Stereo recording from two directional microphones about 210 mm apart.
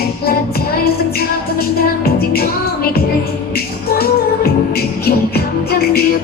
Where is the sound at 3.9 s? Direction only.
45° left (ahead or behind).